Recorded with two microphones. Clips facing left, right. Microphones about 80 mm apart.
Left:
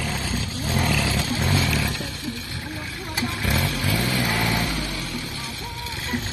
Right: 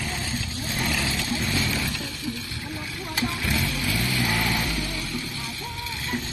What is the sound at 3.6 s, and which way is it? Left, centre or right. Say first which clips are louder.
Vehicle: left 3 dB; left.